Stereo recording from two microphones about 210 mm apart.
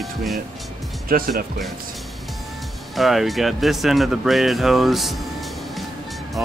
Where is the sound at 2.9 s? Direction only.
Centre (ahead or behind).